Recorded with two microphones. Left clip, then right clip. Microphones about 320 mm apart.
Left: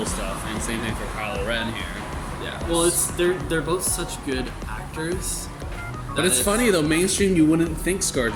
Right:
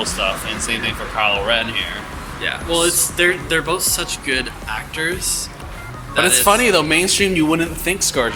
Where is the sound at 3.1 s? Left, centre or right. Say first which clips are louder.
Right 6 dB; centre.